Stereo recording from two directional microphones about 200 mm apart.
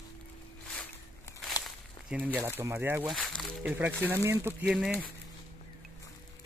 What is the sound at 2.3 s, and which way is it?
Speech, 10° right (ahead or behind).